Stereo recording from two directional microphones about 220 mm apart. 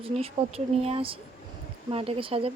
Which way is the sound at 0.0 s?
25° right (ahead or behind).